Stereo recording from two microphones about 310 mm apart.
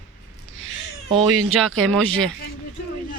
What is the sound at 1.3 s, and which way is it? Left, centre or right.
Speech, right.